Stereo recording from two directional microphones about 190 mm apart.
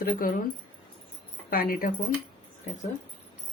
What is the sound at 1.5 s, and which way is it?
Speech, 50° left (ahead or behind).